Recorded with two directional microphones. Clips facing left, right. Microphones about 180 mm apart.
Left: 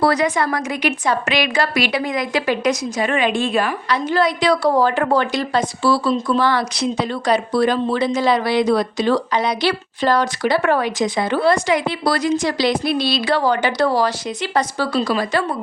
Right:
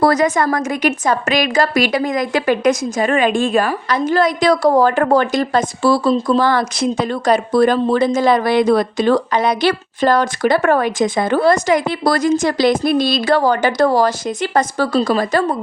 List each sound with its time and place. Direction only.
0.0 s speech: 45° right (ahead or behind)